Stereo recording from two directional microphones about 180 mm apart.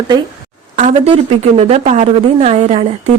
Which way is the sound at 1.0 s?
35° right (ahead or behind).